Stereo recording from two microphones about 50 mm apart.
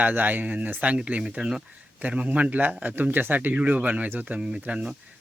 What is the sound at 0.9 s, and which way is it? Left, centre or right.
Speech, right.